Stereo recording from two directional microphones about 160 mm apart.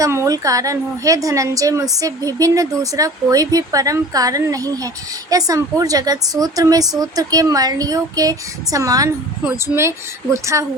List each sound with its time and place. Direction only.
0.0 s a woman's voice: 20° right (ahead or behind)